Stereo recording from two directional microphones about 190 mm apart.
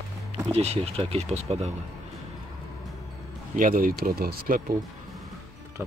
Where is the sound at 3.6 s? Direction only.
45° right (ahead or behind).